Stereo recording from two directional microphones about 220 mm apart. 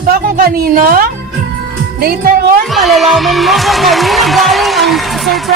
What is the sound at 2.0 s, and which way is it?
Speech, 45° right (ahead or behind).